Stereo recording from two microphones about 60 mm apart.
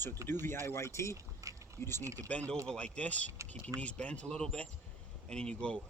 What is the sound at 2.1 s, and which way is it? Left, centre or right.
Speech, left.